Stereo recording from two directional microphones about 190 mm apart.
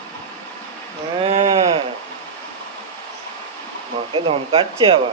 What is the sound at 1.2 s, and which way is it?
Sheep, 30° right (ahead or behind).